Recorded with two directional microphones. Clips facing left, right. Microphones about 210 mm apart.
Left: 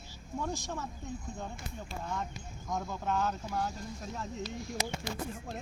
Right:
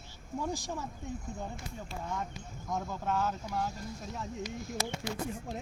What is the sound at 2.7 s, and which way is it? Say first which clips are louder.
Speech: even; 5° right (ahead or behind).